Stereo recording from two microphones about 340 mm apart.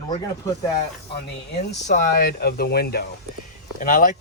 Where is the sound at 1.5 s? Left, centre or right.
Left.